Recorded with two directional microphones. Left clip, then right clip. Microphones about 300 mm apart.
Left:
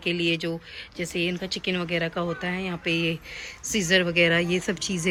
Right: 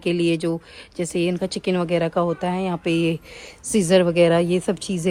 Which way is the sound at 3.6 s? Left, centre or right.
Right.